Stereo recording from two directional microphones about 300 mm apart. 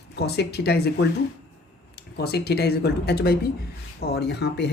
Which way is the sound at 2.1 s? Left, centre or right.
Left.